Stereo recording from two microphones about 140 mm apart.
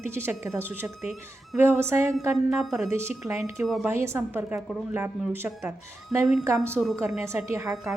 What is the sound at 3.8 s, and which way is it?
Speech, 20° right (ahead or behind).